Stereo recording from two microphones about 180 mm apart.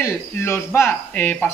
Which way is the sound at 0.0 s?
15° left (ahead or behind).